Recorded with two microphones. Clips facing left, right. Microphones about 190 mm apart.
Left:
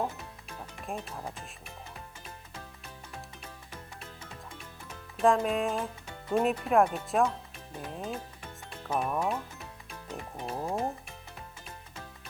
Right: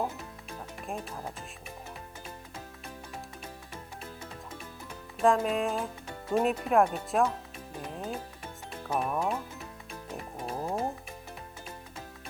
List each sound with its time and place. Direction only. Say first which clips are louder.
0.9 s speech: even; centre (ahead or behind)
5.1 s speech: even; centre (ahead or behind)
7.8 s music: even; centre (ahead or behind)
8.7 s speech: even; centre (ahead or behind)
10.2 s music: even; 5° right (ahead or behind)